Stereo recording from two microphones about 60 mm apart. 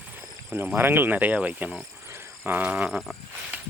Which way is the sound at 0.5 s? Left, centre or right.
Right.